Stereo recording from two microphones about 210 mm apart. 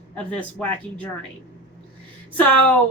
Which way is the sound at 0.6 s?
10° left (ahead or behind).